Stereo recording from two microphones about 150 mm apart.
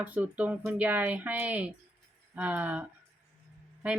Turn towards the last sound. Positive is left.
turn(degrees=-10)  # may be behind; listen again after turning